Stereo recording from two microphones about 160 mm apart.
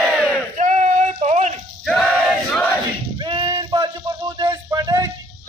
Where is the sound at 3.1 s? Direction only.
30° right (ahead or behind).